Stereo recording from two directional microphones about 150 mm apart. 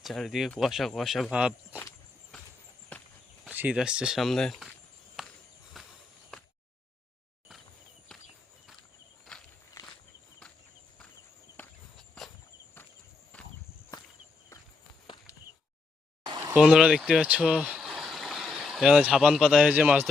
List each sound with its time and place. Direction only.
0.0 s speech: centre (ahead or behind)
2.9 s walk: 10° left (ahead or behind)
3.4 s speech: 10° right (ahead or behind)
5.2 s walk: 5° right (ahead or behind)
6.3 s a sound: 5° left (ahead or behind)
9.3 s walk: 5° left (ahead or behind)
9.8 s walk: 20° left (ahead or behind)
11.5 s walk: 5° left (ahead or behind)
13.3 s walk: 10° left (ahead or behind)
15.0 s a sound: 30° left (ahead or behind)
16.2 s a sound: 30° right (ahead or behind)
16.5 s speech: 5° right (ahead or behind)